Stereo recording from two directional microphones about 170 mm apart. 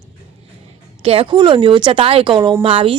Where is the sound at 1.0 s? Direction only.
35° right (ahead or behind).